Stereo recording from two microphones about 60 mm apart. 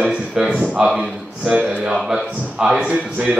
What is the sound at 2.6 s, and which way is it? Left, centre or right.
Speech, centre.